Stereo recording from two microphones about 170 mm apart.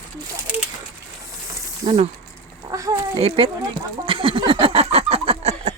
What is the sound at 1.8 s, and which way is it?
Speech, 40° right (ahead or behind).